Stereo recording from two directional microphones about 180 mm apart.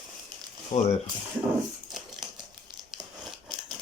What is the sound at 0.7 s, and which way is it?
Speech, 40° left (ahead or behind).